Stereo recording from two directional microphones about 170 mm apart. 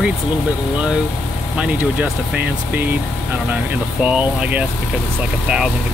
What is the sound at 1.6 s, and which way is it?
Speech, 5° right (ahead or behind).